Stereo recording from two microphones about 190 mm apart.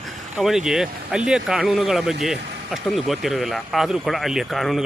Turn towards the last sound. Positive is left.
turn(degrees=0)  # may be behind; listen again after turning